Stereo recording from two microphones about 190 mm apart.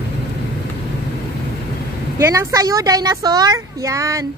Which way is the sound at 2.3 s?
15° right (ahead or behind).